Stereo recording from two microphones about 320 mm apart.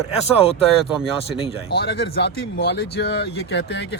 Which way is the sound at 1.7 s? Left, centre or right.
Left.